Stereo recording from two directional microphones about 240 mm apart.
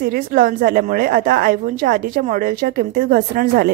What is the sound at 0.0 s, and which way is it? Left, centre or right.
Speech, right.